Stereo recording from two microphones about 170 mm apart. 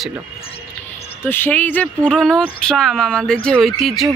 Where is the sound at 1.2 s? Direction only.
10° left (ahead or behind).